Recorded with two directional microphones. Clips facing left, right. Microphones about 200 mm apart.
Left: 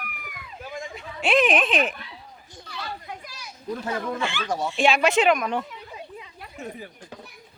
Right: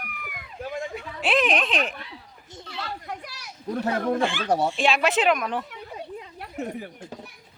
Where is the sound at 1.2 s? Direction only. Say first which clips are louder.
Left 3 dB; centre (ahead or behind).